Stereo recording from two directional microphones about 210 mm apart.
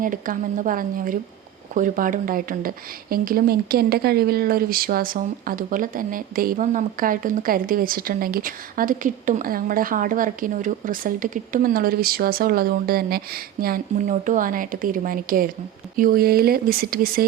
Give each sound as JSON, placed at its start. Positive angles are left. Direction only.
{"t": 0.0, "sound": "a woman's voice", "side_deg": -40}